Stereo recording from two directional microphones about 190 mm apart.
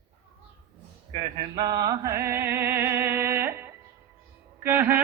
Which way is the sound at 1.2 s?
20° right (ahead or behind).